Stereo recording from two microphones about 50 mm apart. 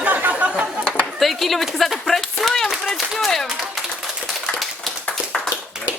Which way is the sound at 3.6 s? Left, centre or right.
Centre.